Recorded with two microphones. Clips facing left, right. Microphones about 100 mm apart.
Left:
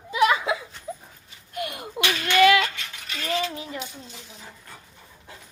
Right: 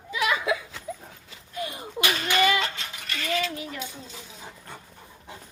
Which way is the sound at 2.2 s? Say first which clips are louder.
Left 6 dB; 90° left.